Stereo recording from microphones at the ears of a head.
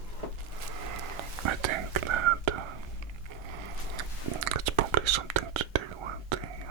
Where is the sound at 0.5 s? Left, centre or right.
Right.